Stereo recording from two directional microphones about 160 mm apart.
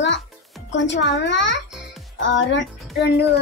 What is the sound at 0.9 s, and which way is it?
Speech, 90° left.